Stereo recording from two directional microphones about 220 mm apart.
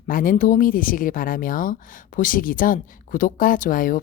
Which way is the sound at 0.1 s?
40° left (ahead or behind).